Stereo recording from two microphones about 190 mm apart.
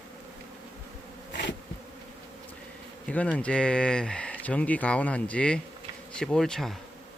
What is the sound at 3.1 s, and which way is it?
Speech, 5° left (ahead or behind).